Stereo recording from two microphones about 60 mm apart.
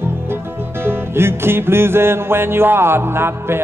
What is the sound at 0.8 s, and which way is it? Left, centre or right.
Music, right.